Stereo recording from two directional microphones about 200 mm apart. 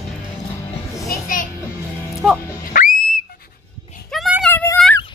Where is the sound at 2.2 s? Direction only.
Centre (ahead or behind).